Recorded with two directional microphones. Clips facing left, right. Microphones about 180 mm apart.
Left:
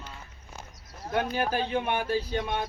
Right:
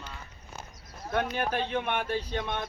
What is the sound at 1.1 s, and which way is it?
Speech, 35° left (ahead or behind).